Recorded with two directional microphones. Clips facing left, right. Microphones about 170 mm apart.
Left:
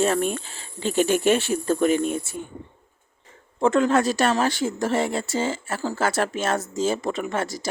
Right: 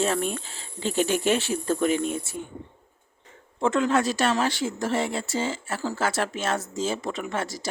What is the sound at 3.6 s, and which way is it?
Speech, 45° left (ahead or behind).